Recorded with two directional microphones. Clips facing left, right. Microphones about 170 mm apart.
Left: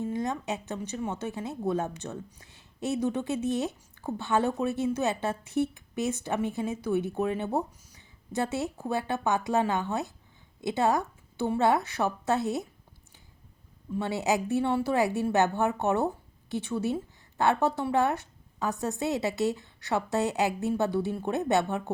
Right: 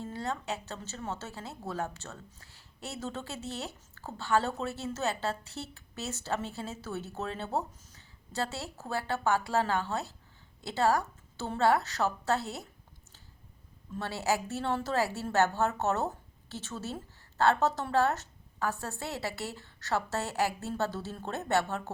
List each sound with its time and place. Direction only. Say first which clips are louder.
0.0 s speech: left 6 dB; 15° left (ahead or behind)
13.9 s speech: left 4 dB; 15° left (ahead or behind)